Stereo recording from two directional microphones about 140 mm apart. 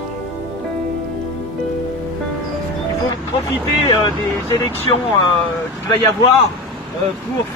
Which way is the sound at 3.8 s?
30° left (ahead or behind).